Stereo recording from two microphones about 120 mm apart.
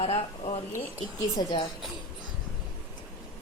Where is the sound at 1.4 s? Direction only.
40° left (ahead or behind).